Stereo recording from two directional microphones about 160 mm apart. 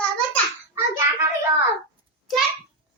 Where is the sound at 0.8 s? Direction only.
15° right (ahead or behind).